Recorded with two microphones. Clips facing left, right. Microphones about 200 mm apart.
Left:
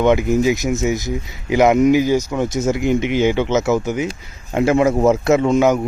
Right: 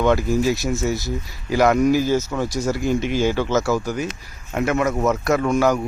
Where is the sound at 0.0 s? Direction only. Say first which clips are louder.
Left 3 dB; 20° left (ahead or behind).